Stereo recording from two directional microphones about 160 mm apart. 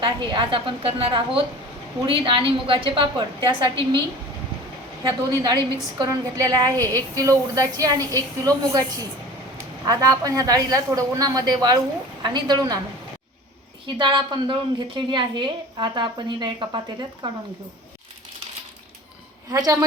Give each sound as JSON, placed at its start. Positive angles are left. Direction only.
{"t": 0.0, "sound": "a woman's voice", "side_deg": -30}
{"t": 6.0, "sound": "a woman's voice", "side_deg": -25}
{"t": 13.8, "sound": "a woman's voice", "side_deg": -30}
{"t": 19.5, "sound": "a woman's voice", "side_deg": -20}